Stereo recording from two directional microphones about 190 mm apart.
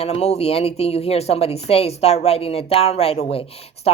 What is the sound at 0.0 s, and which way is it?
Speech, 35° left (ahead or behind).